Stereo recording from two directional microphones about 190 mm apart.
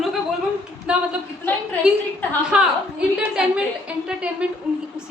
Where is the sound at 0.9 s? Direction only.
5° right (ahead or behind).